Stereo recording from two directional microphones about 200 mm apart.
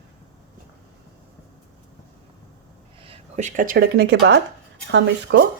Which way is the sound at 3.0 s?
35° right (ahead or behind).